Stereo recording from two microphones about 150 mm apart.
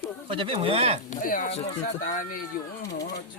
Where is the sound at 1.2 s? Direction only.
60° left (ahead or behind).